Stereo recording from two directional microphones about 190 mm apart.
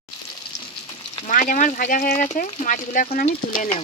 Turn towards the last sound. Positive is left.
turn(degrees=45)  # may be behind; listen again after turning